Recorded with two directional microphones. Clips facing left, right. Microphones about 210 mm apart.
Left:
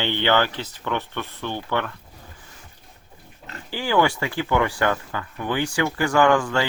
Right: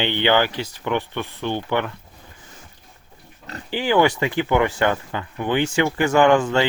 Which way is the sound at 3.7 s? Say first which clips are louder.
Right 3 dB; 20° right (ahead or behind).